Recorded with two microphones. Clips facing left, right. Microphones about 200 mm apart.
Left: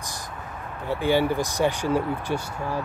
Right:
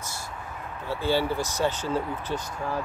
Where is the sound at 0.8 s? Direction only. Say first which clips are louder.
Left 4 dB; 15° left (ahead or behind).